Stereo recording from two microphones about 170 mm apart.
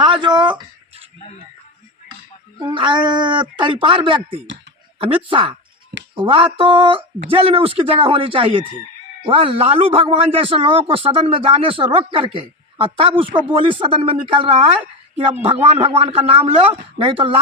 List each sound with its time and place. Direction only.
0.0 s a sound: 25° right (ahead or behind)
2.6 s a man's voice: 30° right (ahead or behind)
15.7 s a man's voice: 35° right (ahead or behind)